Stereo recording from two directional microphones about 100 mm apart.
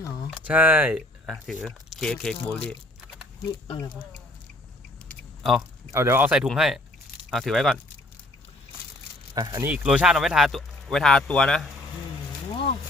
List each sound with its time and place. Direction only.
0.4 s speech: 15° right (ahead or behind)
1.3 s speech: centre (ahead or behind)
5.4 s speech: centre (ahead or behind)
5.9 s speech: 25° right (ahead or behind)
6.2 s speech: 10° right (ahead or behind)
9.3 s speech: 40° right (ahead or behind)
9.6 s speech: 10° right (ahead or behind); by 11.6 s 10° left (ahead or behind)